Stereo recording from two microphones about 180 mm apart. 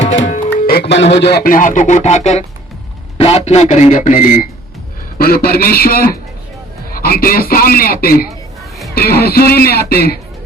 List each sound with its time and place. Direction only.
0.3 s music: 40° left (ahead or behind)
0.7 s speech: 65° left (ahead or behind)